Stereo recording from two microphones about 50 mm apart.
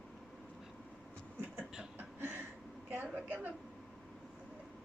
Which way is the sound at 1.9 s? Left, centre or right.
Right.